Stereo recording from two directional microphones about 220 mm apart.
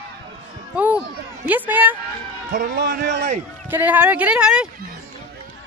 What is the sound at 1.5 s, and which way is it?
Speech, 10° right (ahead or behind).